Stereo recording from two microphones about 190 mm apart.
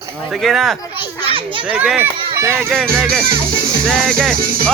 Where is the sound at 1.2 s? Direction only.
30° right (ahead or behind).